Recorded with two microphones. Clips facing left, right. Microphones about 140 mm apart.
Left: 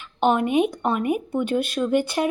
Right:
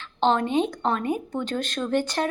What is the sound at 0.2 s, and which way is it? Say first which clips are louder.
Speech: left 2 dB; 10° left (ahead or behind).